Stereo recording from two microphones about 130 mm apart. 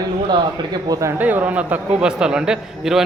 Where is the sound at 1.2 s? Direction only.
10° right (ahead or behind).